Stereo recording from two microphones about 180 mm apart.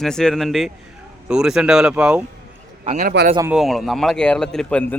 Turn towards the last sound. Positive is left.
turn(degrees=10)  # may be behind; listen again after turning